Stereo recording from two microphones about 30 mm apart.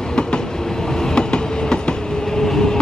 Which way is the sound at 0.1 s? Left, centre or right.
Left.